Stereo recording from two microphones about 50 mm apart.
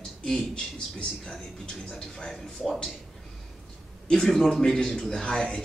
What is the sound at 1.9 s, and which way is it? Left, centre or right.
A man's voice, centre.